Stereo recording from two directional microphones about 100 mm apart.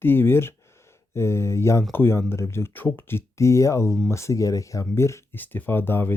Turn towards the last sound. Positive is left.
turn(degrees=25)  # may be behind; listen again after turning